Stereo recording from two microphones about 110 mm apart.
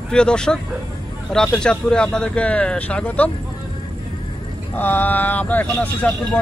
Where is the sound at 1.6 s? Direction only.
10° left (ahead or behind).